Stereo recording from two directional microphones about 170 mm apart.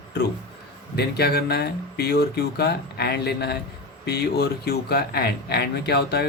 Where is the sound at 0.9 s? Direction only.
70° left (ahead or behind).